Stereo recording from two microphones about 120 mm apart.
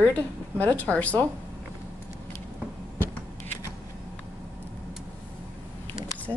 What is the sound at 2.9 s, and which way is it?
Scissors, 15° left (ahead or behind).